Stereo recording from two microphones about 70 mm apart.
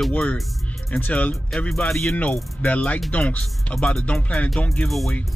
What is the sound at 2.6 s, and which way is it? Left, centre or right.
Speech, left.